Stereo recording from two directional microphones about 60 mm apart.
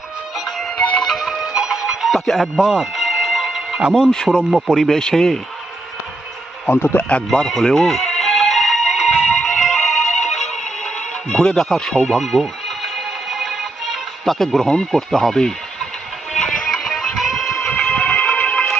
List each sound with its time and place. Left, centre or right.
0.3 s music: centre
0.8 s music: left
1.0 s music: centre
3.9 s speech: centre
4.5 s speech: centre
4.8 s speech: centre
6.7 s a man's voice: left
7.3 s music: centre
16.8 s music: centre
17.7 s music: centre